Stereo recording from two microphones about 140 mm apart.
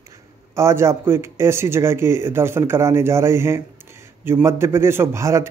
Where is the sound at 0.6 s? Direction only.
20° right (ahead or behind).